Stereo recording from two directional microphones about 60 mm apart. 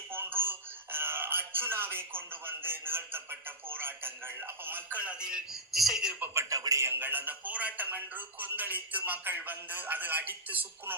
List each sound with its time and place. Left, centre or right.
0.1 s speech: right
4.9 s a man's voice: centre
5.5 s speech: centre
6.5 s a man's voice: right
6.8 s speech: right